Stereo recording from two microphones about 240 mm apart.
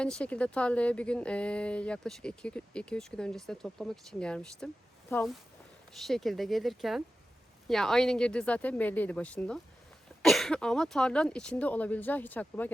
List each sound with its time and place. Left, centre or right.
0.0 s speech: centre